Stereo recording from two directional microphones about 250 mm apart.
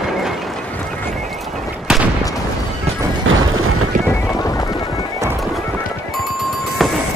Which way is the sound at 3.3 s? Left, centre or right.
Right.